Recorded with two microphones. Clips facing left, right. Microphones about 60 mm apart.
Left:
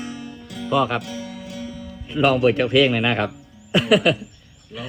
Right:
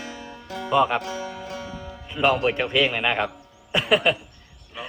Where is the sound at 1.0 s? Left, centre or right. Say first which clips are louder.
Right 1 dB; right.